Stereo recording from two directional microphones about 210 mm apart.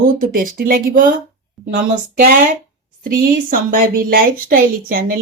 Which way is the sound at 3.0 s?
40° right (ahead or behind).